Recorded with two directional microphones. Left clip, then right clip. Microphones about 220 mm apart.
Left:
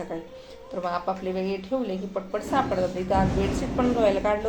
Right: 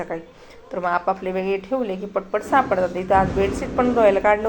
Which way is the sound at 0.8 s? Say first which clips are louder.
Right 7 dB; 25° right (ahead or behind).